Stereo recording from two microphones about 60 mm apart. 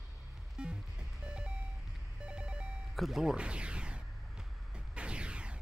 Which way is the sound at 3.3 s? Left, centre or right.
Centre.